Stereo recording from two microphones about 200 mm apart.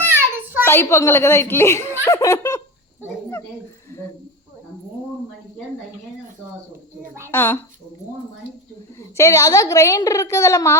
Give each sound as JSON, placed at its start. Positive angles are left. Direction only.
{"t": 0.0, "sound": "a sound", "side_deg": -10}
{"t": 0.6, "sound": "speech", "side_deg": 10}
{"t": 7.3, "sound": "speech", "side_deg": 10}
{"t": 9.0, "sound": "speech", "side_deg": 15}